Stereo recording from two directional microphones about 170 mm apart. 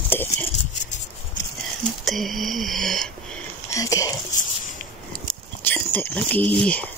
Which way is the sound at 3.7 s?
20° left (ahead or behind).